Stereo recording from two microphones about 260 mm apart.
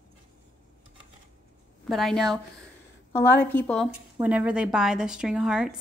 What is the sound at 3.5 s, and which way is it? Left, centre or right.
Speech, centre.